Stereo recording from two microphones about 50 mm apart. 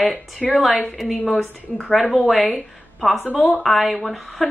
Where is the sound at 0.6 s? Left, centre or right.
Centre.